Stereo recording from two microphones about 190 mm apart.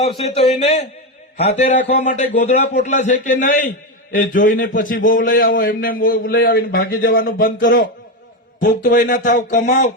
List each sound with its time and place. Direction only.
0.0 s a man's voice: 35° left (ahead or behind)